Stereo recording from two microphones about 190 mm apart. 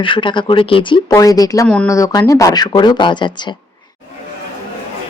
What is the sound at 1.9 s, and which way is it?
A woman's voice, 15° left (ahead or behind).